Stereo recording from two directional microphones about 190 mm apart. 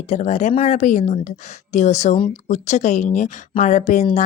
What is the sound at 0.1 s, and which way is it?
Speech, 40° left (ahead or behind).